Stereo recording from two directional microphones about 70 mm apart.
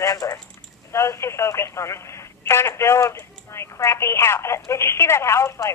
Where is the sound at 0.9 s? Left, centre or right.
Left.